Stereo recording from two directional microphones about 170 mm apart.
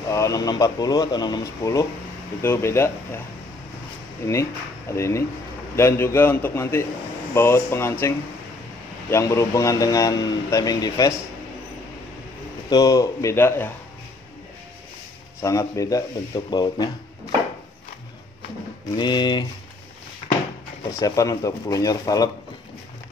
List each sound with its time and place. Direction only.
0.1 s a man's voice: 20° left (ahead or behind)
4.3 s a man's voice: 15° left (ahead or behind)
9.1 s a man's voice: 15° left (ahead or behind)
12.6 s a man's voice: 20° left (ahead or behind)
15.4 s a man's voice: 20° left (ahead or behind)
18.9 s a man's voice: 25° left (ahead or behind)
20.9 s a man's voice: 20° left (ahead or behind)